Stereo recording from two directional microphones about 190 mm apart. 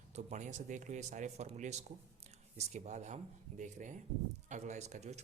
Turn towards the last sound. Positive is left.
turn(degrees=-35)  # may be behind; listen again after turning